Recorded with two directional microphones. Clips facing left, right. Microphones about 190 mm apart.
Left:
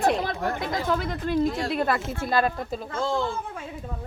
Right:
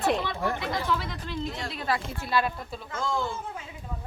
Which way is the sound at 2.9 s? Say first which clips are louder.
Left 3 dB; 30° left (ahead or behind).